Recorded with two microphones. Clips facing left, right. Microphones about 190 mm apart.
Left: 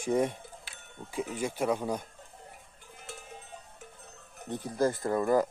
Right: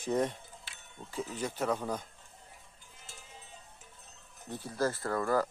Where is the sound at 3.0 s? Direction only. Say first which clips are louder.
Left 9 dB; 60° left (ahead or behind).